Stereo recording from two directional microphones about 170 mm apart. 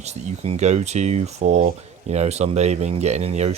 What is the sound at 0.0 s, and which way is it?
Speech, 40° right (ahead or behind).